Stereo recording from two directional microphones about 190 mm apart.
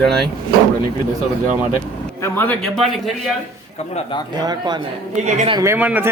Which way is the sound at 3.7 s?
35° left (ahead or behind).